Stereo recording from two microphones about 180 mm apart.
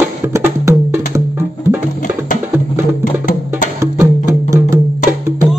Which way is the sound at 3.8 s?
15° right (ahead or behind).